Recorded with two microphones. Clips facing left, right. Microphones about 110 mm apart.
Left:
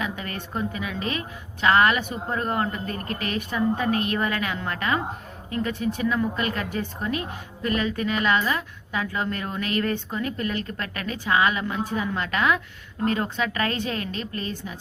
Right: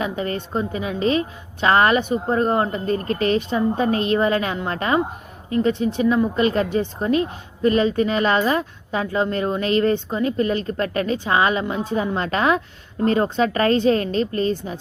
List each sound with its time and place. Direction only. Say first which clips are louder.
0.0 s a woman's voice: right 7 dB; 30° right (ahead or behind)